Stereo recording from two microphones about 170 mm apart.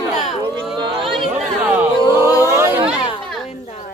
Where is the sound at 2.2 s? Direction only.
20° left (ahead or behind).